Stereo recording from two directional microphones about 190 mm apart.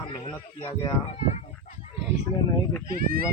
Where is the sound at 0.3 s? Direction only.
25° left (ahead or behind).